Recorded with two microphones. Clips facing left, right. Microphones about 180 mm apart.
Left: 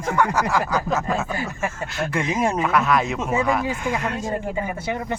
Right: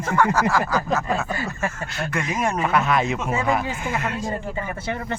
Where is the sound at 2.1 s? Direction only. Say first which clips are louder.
Left 2 dB; 25° left (ahead or behind).